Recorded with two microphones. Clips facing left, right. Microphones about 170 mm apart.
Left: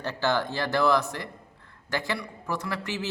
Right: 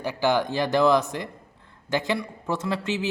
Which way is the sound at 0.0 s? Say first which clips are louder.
Right 4 dB; 10° right (ahead or behind).